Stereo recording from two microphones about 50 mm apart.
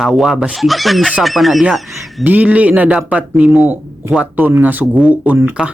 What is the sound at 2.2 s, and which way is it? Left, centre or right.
Speech, right.